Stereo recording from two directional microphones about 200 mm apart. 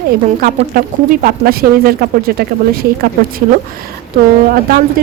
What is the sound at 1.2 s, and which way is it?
Speech, 50° right (ahead or behind).